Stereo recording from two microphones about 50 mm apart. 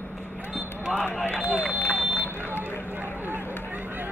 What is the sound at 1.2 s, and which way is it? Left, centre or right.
Run, left.